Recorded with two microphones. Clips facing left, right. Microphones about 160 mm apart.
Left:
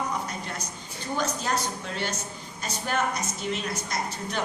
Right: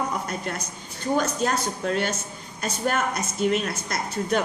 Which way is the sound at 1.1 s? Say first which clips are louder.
Right 4 dB; 50° right (ahead or behind).